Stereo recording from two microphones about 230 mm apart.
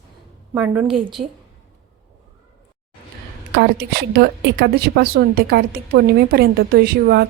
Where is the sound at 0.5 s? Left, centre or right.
Centre.